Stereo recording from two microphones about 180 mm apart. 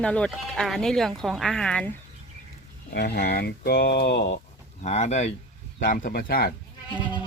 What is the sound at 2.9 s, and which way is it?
Speech, 60° left (ahead or behind).